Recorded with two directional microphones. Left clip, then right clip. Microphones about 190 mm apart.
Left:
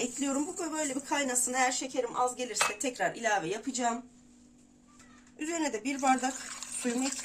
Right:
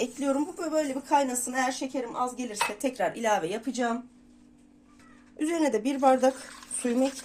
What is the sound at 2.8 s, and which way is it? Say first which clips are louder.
Speech: right 3 dB; 45° right (ahead or behind).